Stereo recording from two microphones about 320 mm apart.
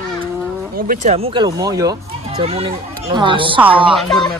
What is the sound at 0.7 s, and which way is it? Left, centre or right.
Speech, right.